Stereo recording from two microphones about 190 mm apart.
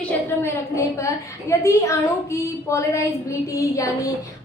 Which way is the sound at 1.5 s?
15° left (ahead or behind).